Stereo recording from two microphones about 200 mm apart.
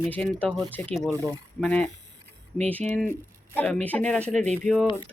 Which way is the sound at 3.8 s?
5° left (ahead or behind).